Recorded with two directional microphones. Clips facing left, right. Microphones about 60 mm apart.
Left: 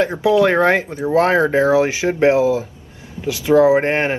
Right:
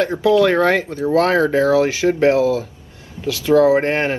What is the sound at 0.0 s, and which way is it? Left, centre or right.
Speech, left.